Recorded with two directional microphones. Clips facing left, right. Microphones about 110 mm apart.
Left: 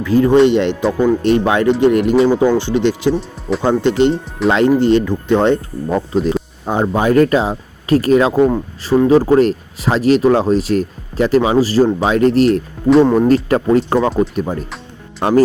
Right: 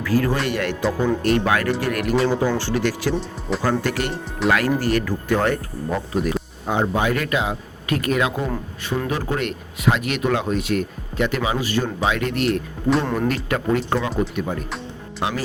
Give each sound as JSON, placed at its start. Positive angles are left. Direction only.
{"t": 0.0, "sound": "speech", "side_deg": 20}
{"t": 6.7, "sound": "speech", "side_deg": 40}